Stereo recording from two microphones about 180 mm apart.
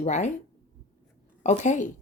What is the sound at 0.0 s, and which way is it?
Speech, 40° left (ahead or behind).